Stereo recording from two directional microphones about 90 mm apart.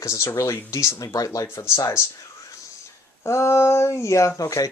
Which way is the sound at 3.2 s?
30° left (ahead or behind).